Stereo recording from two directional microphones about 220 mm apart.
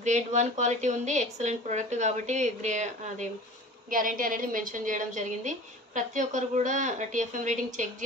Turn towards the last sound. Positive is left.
turn(degrees=-35)  # may be behind; listen again after turning